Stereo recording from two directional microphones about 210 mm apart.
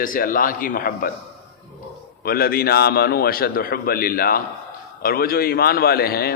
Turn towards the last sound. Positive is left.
turn(degrees=45)  # may be behind; listen again after turning